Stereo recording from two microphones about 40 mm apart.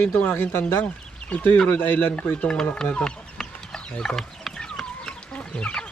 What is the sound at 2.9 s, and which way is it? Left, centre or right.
Chicken, left.